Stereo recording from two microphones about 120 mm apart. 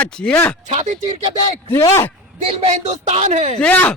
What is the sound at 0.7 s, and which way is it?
Speech, 70° right (ahead or behind).